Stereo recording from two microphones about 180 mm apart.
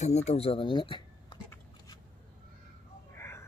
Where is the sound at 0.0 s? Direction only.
40° left (ahead or behind).